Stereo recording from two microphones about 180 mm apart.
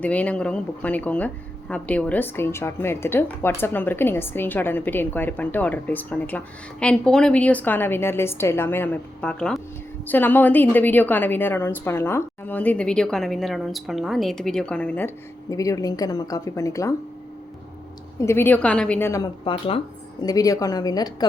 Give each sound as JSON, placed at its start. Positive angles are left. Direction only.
{"t": 0.0, "sound": "speech", "side_deg": 10}
{"t": 18.2, "sound": "speech", "side_deg": 15}
{"t": 19.5, "sound": "speech", "side_deg": 30}
{"t": 20.2, "sound": "a woman's voice", "side_deg": 20}